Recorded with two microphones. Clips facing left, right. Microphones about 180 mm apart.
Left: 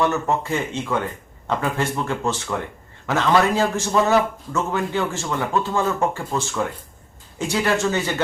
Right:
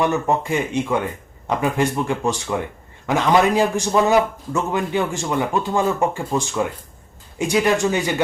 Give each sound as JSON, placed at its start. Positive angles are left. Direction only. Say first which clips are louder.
{"t": 0.0, "sound": "a man's voice", "louder": "right 2 dB", "side_deg": -15}